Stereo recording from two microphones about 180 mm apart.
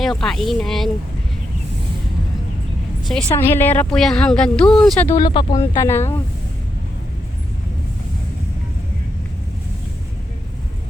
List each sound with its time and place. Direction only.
0.0 s speech: centre (ahead or behind)
3.0 s a woman's voice: centre (ahead or behind)
3.3 s speech: 10° left (ahead or behind)
5.1 s speech: 25° left (ahead or behind)
5.7 s speech: 15° left (ahead or behind)